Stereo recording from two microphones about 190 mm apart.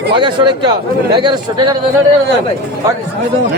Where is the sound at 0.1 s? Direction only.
25° right (ahead or behind).